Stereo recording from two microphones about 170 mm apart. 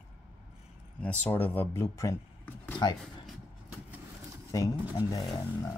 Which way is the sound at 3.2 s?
10° right (ahead or behind).